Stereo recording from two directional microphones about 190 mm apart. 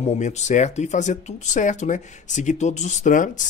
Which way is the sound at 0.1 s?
35° left (ahead or behind).